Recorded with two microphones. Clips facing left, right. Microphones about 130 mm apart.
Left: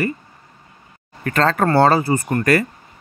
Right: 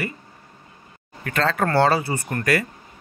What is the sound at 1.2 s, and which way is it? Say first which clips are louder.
Speech: left 5 dB; 45° left (ahead or behind).